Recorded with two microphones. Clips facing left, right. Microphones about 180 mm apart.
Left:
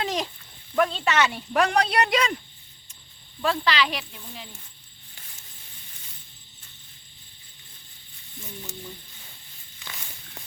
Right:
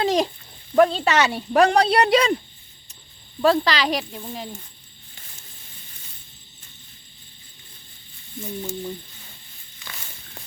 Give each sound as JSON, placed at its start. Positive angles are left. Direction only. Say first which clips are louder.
{"t": 0.0, "sound": "a sound", "louder": "right 8 dB", "side_deg": -35}
{"t": 0.8, "sound": "speech", "louder": "right 6 dB", "side_deg": -35}
{"t": 3.4, "sound": "speech", "louder": "right 5 dB", "side_deg": -40}
{"t": 9.8, "sound": "walk", "louder": "right 1 dB", "side_deg": 10}